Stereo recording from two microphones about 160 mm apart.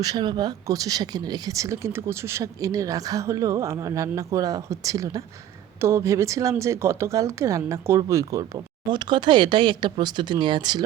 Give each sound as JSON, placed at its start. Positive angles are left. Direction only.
{"t": 0.0, "sound": "speech", "side_deg": -25}